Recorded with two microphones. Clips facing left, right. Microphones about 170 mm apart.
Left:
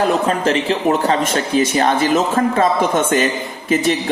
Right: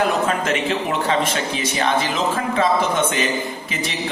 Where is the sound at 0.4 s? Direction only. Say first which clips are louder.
Left 5 dB; 35° left (ahead or behind).